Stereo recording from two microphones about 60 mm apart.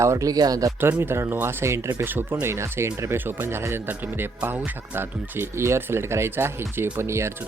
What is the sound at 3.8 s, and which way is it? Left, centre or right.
Speech, right.